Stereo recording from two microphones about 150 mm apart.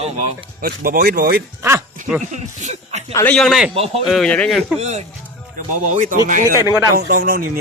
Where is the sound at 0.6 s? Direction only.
85° right.